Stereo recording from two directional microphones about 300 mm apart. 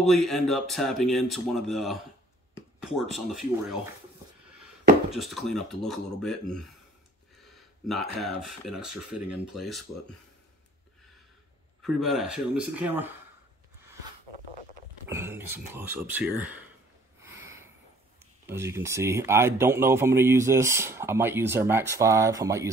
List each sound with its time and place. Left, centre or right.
0.0 s speech: centre
5.1 s speech: centre
7.8 s speech: centre
11.8 s speech: centre
15.0 s speech: centre
17.2 s a sound: centre
18.5 s speech: centre